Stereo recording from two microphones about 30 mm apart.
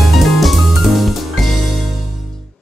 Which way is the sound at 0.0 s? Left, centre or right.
Centre.